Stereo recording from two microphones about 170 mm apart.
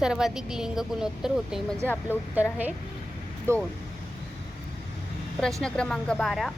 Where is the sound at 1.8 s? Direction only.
10° left (ahead or behind).